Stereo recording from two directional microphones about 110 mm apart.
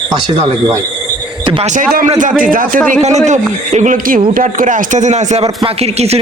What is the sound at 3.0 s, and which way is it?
Speech, 90° right.